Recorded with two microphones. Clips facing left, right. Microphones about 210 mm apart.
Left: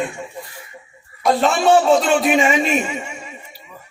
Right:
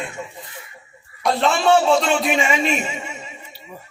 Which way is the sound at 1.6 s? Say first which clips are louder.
Left 2 dB; 45° left (ahead or behind).